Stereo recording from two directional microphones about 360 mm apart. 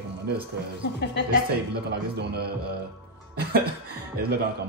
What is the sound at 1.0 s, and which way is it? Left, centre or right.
Speech, left.